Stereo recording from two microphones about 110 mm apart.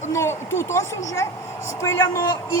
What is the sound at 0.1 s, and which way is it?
A woman's voice, 25° left (ahead or behind).